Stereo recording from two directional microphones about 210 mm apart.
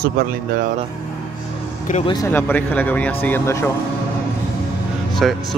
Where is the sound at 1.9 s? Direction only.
20° left (ahead or behind).